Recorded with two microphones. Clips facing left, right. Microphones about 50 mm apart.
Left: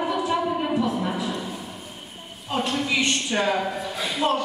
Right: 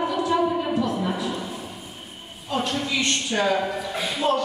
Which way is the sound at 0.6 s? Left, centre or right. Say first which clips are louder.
Even; centre.